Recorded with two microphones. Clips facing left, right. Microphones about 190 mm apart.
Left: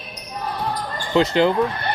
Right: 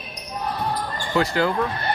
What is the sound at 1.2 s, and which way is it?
Speech, 20° left (ahead or behind).